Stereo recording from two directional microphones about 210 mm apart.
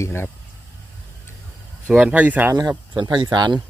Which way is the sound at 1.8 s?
5° right (ahead or behind).